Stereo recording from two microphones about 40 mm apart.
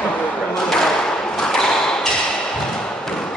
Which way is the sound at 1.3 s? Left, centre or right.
Centre.